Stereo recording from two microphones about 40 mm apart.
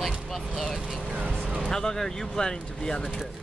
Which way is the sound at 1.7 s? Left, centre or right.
Centre.